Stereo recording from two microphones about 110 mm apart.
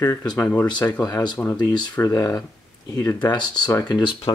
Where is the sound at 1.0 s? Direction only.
35° left (ahead or behind).